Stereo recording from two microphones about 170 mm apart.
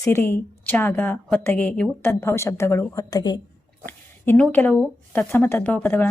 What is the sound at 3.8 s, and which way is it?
A woman's voice, 10° left (ahead or behind).